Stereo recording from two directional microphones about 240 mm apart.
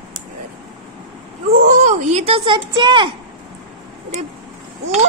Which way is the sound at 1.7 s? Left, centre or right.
Right.